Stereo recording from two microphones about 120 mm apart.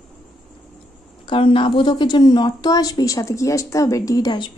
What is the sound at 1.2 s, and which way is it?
A woman's voice, 45° left (ahead or behind).